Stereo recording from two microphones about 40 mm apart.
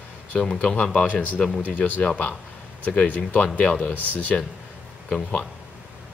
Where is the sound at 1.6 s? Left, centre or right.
Left.